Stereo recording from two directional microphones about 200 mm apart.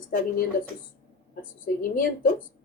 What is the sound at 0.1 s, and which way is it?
Speech, 45° left (ahead or behind).